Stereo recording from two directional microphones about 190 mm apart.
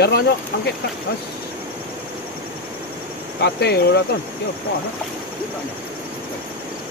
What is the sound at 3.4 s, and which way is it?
Speech, 60° left (ahead or behind).